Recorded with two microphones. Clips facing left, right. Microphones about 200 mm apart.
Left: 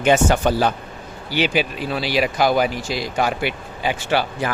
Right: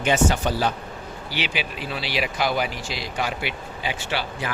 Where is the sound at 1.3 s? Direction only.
45° left (ahead or behind).